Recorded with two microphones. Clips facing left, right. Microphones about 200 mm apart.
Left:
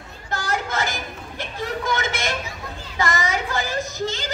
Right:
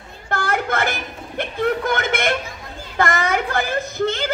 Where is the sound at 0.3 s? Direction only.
60° right (ahead or behind).